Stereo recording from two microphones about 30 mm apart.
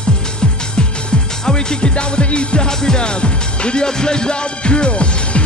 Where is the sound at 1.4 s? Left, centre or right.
Left.